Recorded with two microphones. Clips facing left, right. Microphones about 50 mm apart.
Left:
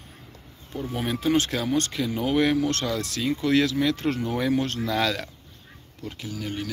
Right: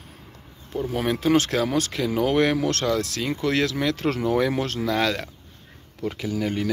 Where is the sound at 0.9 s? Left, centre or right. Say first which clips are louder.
Right 3 dB; right.